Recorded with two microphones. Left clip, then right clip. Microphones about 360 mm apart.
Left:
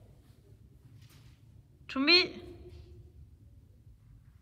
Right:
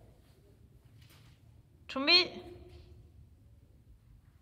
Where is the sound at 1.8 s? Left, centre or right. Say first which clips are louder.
Left 1 dB; centre.